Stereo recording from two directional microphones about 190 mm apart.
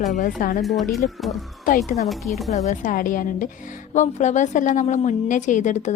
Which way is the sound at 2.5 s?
40° left (ahead or behind).